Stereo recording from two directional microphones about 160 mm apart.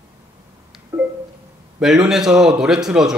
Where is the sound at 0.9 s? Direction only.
15° right (ahead or behind).